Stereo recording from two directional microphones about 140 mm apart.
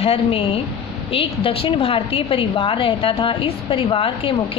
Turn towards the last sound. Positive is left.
turn(degrees=40)  # may be behind; listen again after turning